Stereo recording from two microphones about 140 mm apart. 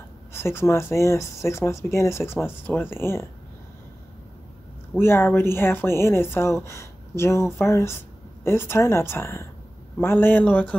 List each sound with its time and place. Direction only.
0.3 s speech: 20° left (ahead or behind)
4.9 s speech: 15° left (ahead or behind)